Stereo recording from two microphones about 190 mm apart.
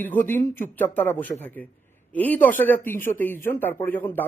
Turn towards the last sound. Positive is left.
turn(degrees=10)  # may be behind; listen again after turning